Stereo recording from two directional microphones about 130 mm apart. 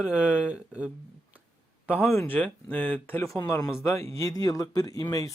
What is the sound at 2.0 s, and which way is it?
Speech, 15° left (ahead or behind).